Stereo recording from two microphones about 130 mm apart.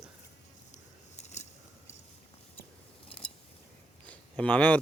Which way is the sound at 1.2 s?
60° left (ahead or behind).